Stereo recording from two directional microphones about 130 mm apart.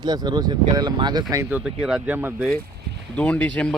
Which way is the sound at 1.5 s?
5° right (ahead or behind).